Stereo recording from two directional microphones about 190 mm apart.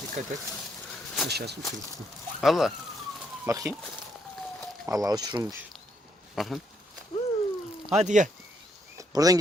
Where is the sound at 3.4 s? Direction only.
15° right (ahead or behind).